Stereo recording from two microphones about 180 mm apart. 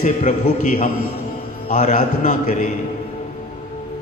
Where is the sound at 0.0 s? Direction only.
40° left (ahead or behind).